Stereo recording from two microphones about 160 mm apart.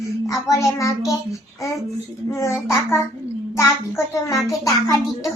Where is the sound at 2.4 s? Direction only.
20° left (ahead or behind).